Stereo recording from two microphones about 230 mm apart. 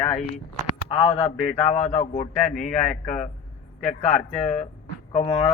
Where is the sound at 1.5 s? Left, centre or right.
Left.